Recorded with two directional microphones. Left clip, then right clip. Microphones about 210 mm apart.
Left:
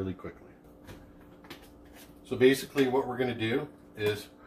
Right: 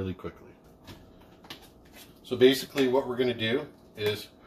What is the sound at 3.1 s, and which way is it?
Speech, 30° right (ahead or behind).